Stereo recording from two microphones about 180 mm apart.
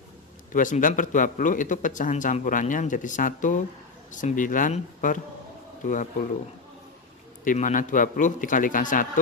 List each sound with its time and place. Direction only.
0.5 s speech: 45° left (ahead or behind)
7.4 s speech: 45° left (ahead or behind)